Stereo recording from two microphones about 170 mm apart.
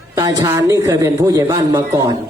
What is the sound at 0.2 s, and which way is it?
A man's voice, 20° right (ahead or behind).